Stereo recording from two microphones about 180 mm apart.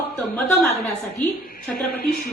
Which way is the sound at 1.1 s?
55° left (ahead or behind).